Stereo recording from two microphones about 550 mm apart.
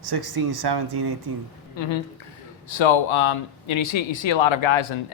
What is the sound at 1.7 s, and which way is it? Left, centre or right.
A woman's voice, left.